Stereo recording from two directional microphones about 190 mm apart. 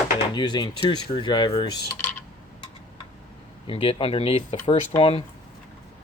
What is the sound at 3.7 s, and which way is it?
Speech, 30° left (ahead or behind).